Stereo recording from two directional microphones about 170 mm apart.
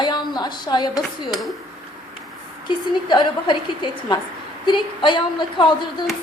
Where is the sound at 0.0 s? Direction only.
25° left (ahead or behind).